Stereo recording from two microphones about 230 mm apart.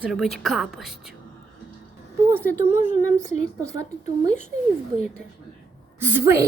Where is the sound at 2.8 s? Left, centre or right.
Left.